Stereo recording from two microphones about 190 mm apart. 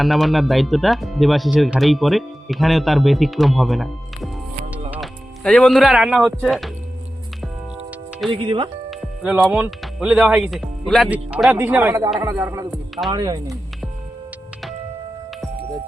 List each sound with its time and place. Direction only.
0.0 s speech: centre (ahead or behind)
8.3 s speech: 25° right (ahead or behind)
8.9 s speech: 5° right (ahead or behind); by 13.6 s 20° right (ahead or behind)